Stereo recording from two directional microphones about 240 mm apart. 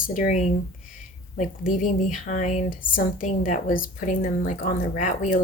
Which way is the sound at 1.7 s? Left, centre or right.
Left.